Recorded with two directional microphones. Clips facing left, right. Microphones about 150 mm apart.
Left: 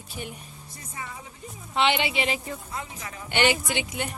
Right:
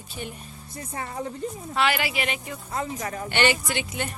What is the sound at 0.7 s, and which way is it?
Speech, 50° right (ahead or behind).